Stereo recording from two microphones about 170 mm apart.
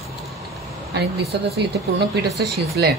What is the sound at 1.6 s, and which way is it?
Speech, 80° right.